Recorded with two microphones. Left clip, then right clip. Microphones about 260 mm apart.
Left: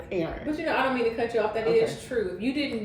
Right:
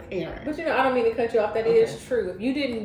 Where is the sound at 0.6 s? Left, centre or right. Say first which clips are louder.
Right 4 dB; centre.